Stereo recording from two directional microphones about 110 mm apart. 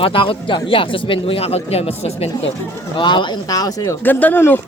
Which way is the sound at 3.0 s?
45° left (ahead or behind).